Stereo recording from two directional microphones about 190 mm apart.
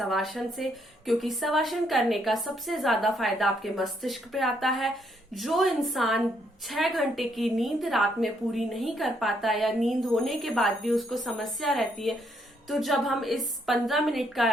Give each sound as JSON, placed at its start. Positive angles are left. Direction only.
{"t": 0.0, "sound": "a woman's voice", "side_deg": 0}